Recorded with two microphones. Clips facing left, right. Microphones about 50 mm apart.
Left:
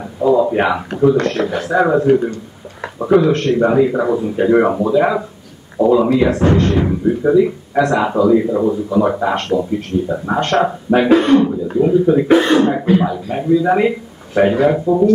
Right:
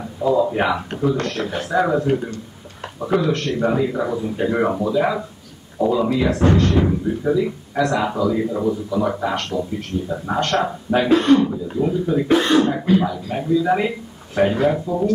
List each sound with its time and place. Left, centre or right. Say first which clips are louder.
0.2 s a sound: left 5 dB; centre
0.9 s a man's voice: left 7 dB; left
1.8 s speech: left 6 dB; centre
8.6 s speech: left 5 dB; left
10.0 s speech: left 4 dB; centre